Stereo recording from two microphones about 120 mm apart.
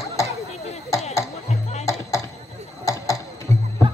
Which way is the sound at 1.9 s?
25° left (ahead or behind).